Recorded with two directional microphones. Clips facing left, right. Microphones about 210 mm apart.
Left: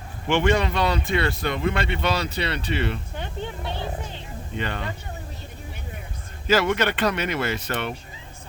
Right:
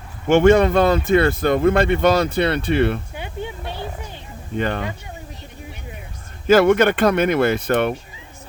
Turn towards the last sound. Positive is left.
turn(degrees=-55)  # may be behind; listen again after turning